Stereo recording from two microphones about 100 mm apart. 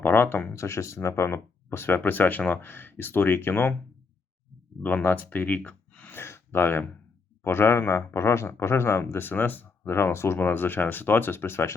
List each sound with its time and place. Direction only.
0.0 s speech: 20° left (ahead or behind)
4.8 s speech: 15° left (ahead or behind)